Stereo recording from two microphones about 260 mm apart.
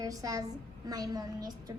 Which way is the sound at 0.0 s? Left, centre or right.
Centre.